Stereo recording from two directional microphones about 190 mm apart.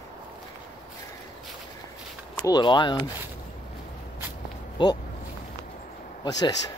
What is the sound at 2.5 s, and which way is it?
Speech, 25° left (ahead or behind).